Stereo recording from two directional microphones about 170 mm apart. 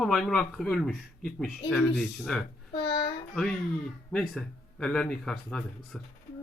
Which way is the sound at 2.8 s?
30° left (ahead or behind).